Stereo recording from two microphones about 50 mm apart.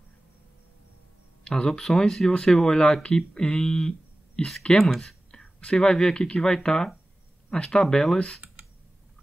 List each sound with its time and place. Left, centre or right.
1.4 s speech: centre